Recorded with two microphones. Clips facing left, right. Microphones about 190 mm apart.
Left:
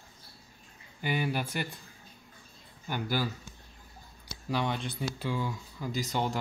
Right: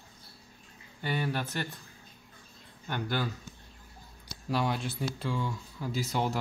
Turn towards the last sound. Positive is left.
turn(degrees=-5)  # may be behind; listen again after turning